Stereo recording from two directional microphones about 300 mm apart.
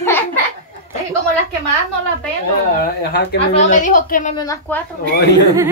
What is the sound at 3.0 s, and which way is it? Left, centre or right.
A woman's voice, left.